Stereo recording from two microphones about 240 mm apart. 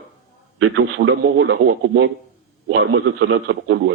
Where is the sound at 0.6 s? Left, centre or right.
Right.